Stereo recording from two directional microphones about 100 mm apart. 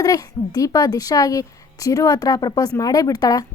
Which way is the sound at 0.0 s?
40° left (ahead or behind).